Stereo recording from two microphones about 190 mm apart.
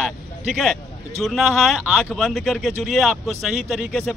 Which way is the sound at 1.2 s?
Centre (ahead or behind).